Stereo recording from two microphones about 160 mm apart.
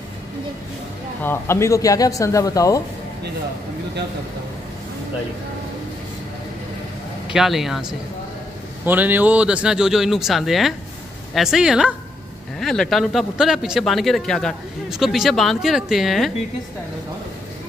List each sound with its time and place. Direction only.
1.2 s speech: 15° left (ahead or behind)
7.2 s a man's voice: centre (ahead or behind)